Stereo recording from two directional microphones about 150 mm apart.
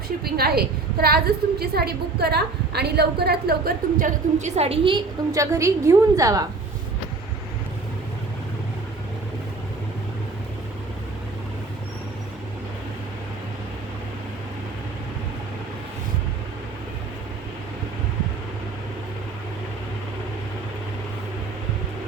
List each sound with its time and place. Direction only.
0.3 s a woman's voice: 90° right; by 6.4 s 20° right (ahead or behind)